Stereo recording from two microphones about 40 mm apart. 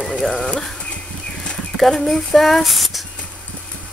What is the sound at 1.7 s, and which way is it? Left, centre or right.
Speech, centre.